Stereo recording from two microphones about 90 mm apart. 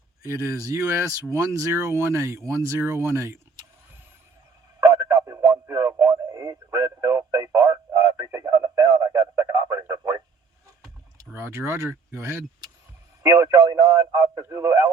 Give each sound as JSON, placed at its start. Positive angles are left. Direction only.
{"t": 0.3, "sound": "speech", "side_deg": -35}
{"t": 4.9, "sound": "radio", "side_deg": -35}
{"t": 11.3, "sound": "speech", "side_deg": -25}
{"t": 13.2, "sound": "speech", "side_deg": -40}
{"t": 14.3, "sound": "speech", "side_deg": -30}